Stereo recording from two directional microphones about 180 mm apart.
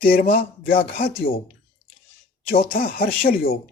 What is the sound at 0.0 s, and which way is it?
Speech, 55° left (ahead or behind).